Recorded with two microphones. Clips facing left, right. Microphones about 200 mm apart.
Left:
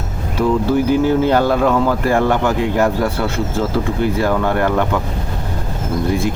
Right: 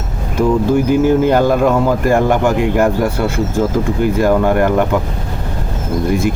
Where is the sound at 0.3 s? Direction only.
15° right (ahead or behind).